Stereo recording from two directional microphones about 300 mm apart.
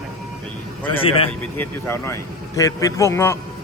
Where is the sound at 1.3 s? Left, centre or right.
Centre.